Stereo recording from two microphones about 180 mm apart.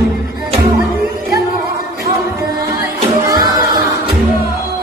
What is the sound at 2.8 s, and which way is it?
Music, 20° right (ahead or behind).